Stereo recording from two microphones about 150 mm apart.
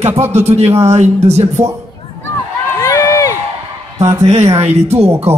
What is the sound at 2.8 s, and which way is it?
Run, 25° left (ahead or behind).